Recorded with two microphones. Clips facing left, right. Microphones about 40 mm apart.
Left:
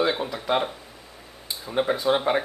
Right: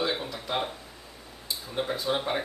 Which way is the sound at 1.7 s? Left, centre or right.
Left.